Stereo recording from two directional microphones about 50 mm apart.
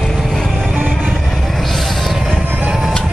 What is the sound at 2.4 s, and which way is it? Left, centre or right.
Music, centre.